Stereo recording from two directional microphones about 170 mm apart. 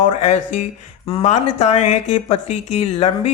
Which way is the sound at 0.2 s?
40° left (ahead or behind).